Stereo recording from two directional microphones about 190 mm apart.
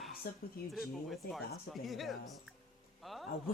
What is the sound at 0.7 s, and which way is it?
A man's voice, centre (ahead or behind).